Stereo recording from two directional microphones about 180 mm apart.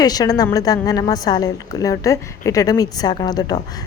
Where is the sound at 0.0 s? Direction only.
20° left (ahead or behind).